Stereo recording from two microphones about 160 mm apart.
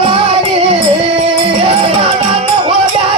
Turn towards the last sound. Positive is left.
turn(degrees=-30)  # may be behind; listen again after turning